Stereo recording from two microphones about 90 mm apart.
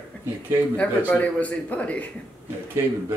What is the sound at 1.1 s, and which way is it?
Speech, 15° left (ahead or behind).